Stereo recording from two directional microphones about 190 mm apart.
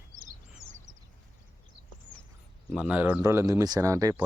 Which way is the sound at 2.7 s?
5° right (ahead or behind).